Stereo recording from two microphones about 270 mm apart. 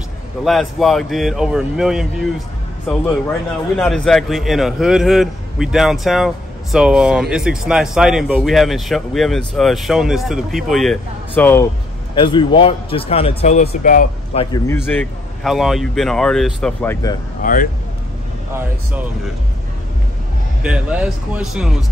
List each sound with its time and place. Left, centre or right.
0.5 s a man's voice: centre
3.7 s a man's voice: centre
12.2 s a man's voice: centre
14.4 s a man's voice: centre
17.4 s speech: left
18.5 s a man's voice: centre
20.6 s a man's voice: centre